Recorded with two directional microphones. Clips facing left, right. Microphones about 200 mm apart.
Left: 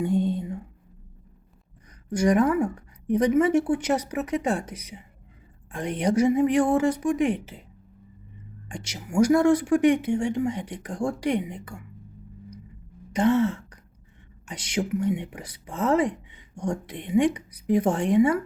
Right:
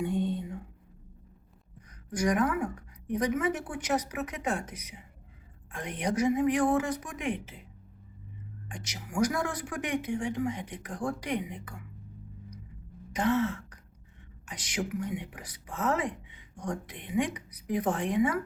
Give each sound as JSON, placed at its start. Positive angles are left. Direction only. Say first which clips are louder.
{"t": 0.1, "sound": "a sound", "louder": "left 6 dB", "side_deg": 35}
{"t": 2.0, "sound": "a woman's voice", "louder": "left 7 dB", "side_deg": 30}
{"t": 6.0, "sound": "a woman's voice", "louder": "left 6 dB", "side_deg": 30}
{"t": 8.7, "sound": "speech", "louder": "left 9 dB", "side_deg": 30}
{"t": 13.1, "sound": "speech", "louder": "left 6 dB", "side_deg": 30}